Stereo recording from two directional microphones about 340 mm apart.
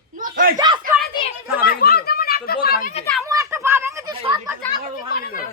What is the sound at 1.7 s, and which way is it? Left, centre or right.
Speech, left.